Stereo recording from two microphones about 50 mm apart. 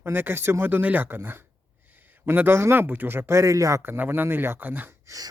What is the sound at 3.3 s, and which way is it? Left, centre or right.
Speech, right.